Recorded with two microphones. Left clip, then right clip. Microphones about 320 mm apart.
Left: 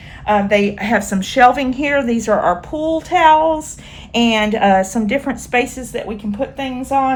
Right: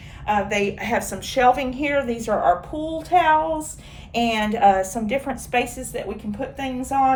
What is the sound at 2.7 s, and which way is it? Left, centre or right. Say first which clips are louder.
Child singing: left 8 dB; left.